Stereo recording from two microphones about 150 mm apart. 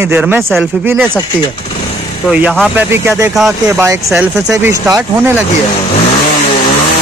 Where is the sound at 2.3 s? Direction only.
5° right (ahead or behind).